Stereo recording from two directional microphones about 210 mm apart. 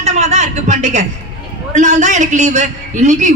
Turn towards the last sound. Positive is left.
turn(degrees=-35)  # may be behind; listen again after turning